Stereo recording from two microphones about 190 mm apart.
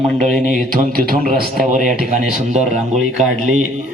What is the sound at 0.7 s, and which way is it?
A man's voice, 50° right (ahead or behind).